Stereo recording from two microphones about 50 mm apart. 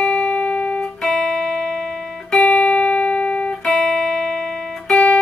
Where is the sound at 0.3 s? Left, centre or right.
Left.